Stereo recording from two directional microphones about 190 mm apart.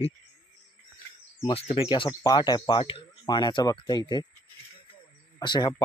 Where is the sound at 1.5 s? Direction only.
30° left (ahead or behind).